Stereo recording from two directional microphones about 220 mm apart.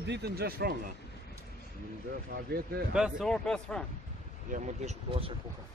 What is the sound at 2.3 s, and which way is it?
Speech, 45° right (ahead or behind).